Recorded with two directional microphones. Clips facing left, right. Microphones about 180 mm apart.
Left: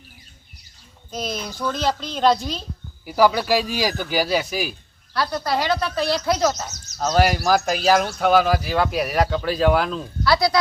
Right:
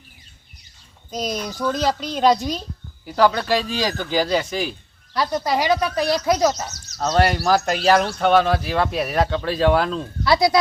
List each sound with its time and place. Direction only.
1.1 s speech: 15° right (ahead or behind)
3.1 s speech: 10° left (ahead or behind)
5.1 s speech: 20° right (ahead or behind)
7.0 s speech: 5° left (ahead or behind)
10.2 s speech: 20° right (ahead or behind)